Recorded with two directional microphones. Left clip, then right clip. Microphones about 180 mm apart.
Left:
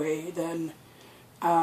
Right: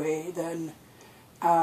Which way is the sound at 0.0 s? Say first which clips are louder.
Even; 15° right (ahead or behind).